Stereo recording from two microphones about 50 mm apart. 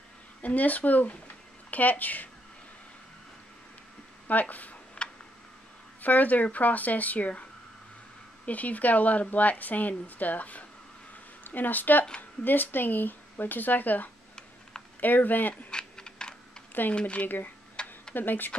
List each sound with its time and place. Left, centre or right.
0.4 s speech: left
4.3 s a woman's voice: left
5.0 s tick-tock: centre
6.0 s a woman's voice: left
8.5 s a woman's voice: left
15.5 s typing: centre
17.0 s speech: left
17.8 s tick-tock: centre
18.1 s a woman's voice: left